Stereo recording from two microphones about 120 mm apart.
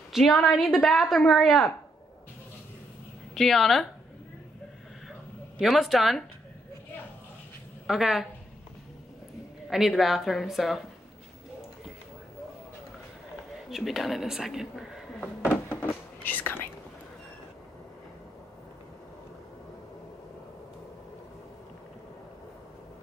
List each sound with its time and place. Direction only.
0.1 s a woman's voice: centre (ahead or behind)
3.3 s a woman's voice: centre (ahead or behind)
5.6 s a woman's voice: centre (ahead or behind)
7.8 s a woman's voice: centre (ahead or behind)
9.7 s a woman's voice: 5° right (ahead or behind)
13.7 s speech: centre (ahead or behind)
15.7 s whispering: 15° left (ahead or behind)